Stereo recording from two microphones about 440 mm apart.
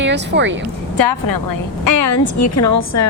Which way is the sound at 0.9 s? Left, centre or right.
Left.